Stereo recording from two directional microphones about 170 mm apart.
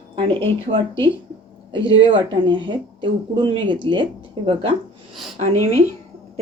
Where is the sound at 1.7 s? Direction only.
30° right (ahead or behind).